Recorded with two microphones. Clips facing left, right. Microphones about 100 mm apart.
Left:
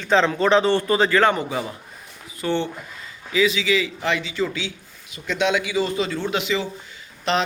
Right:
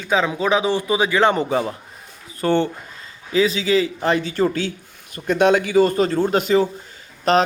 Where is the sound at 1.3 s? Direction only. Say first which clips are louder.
Right 5 dB; 40° right (ahead or behind).